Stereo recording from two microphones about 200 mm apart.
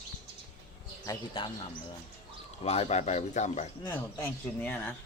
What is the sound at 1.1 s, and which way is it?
Speech, 25° left (ahead or behind).